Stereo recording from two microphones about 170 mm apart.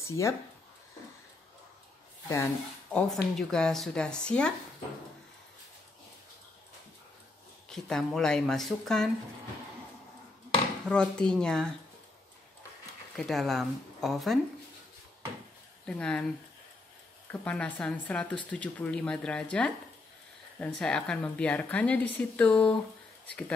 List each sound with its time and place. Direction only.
0.0 s speech: 15° left (ahead or behind)
2.2 s speech: 20° left (ahead or behind)
2.9 s speech: 5° left (ahead or behind)
7.7 s speech: 5° left (ahead or behind)
10.9 s speech: 5° left (ahead or behind)
13.1 s speech: centre (ahead or behind)
15.8 s speech: 5° left (ahead or behind)
17.3 s speech: 10° left (ahead or behind)